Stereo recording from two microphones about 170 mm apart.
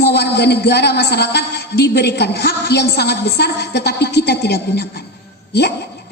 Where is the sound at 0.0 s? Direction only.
80° left.